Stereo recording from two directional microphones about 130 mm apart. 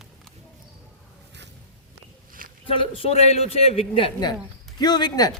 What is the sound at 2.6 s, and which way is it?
A man's voice, 45° left (ahead or behind).